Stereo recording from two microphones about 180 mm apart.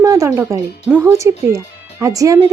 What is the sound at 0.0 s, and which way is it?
Speech, 20° right (ahead or behind).